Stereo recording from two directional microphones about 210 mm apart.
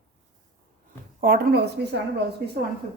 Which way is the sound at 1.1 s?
45° right (ahead or behind).